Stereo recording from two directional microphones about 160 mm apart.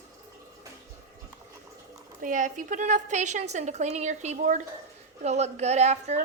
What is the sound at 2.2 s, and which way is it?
A woman's voice, 55° right (ahead or behind).